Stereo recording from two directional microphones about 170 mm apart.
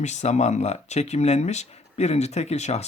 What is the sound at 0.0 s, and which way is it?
Speech, 40° left (ahead or behind).